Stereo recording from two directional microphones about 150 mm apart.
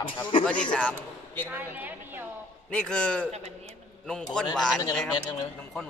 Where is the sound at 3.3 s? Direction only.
45° right (ahead or behind).